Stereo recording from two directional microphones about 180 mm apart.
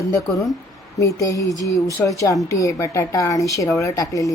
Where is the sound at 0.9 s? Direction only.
15° left (ahead or behind).